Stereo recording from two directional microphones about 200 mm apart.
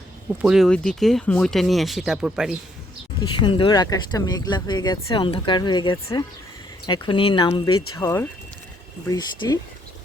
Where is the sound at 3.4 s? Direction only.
25° left (ahead or behind).